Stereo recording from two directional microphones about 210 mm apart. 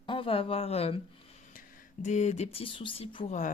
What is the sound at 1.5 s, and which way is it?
Speech, 40° left (ahead or behind).